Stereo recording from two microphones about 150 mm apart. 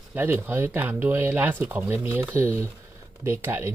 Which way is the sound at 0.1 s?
15° right (ahead or behind).